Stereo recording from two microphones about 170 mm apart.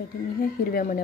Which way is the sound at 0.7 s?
55° left (ahead or behind).